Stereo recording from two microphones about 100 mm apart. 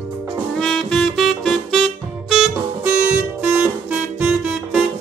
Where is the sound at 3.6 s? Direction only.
15° right (ahead or behind).